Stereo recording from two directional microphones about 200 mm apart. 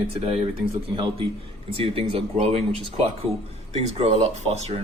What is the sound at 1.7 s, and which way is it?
Speech, 30° right (ahead or behind).